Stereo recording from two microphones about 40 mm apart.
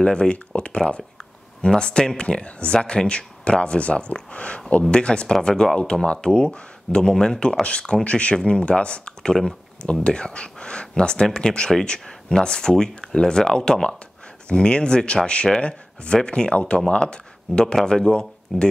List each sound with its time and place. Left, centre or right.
0.0 s speech: left
9.2 s speech: centre
10.0 s speech: left